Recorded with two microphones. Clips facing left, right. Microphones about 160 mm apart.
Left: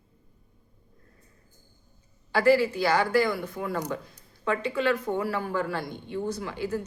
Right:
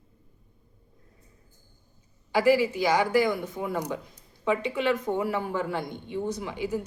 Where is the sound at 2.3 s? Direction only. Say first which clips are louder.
Even; 15° right (ahead or behind).